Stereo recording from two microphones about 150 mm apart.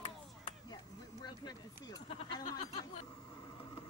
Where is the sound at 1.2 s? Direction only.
25° left (ahead or behind).